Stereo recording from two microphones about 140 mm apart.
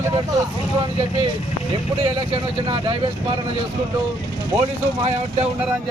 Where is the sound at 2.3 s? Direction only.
40° right (ahead or behind).